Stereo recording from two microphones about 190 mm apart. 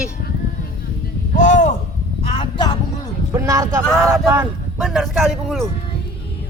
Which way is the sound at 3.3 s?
15° right (ahead or behind).